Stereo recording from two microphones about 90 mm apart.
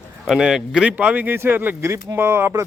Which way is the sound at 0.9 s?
15° right (ahead or behind).